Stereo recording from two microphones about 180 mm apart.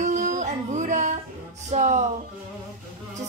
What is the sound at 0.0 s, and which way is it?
Child singing, 45° right (ahead or behind).